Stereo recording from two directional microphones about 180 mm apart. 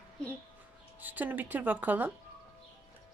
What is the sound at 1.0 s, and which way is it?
Speech, 10° right (ahead or behind).